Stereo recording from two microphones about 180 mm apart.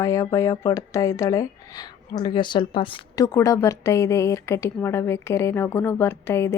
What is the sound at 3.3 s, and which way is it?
Speech, 15° left (ahead or behind).